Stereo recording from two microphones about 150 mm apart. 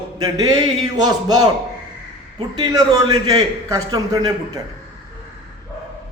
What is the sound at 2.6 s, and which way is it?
A man's voice, 25° right (ahead or behind).